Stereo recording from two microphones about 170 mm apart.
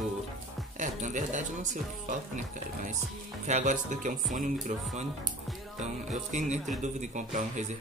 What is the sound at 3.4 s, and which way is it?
Speech, 45° right (ahead or behind).